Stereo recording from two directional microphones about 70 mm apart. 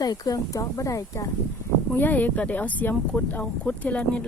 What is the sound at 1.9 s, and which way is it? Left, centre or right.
Speech, left.